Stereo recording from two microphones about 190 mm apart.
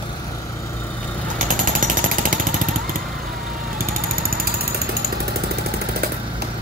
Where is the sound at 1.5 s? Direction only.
45° right (ahead or behind).